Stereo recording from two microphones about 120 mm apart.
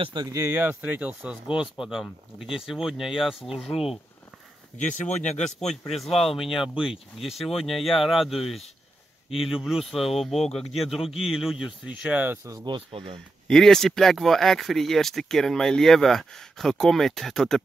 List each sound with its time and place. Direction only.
0.0 s speech: 35° right (ahead or behind)
0.4 s speech: 20° right (ahead or behind); by 4.0 s centre (ahead or behind)
5.1 s speech: 70° left (ahead or behind)
5.7 s speech: centre (ahead or behind)
12.4 s speech: 35° right (ahead or behind)
13.5 s speech: 5° left (ahead or behind)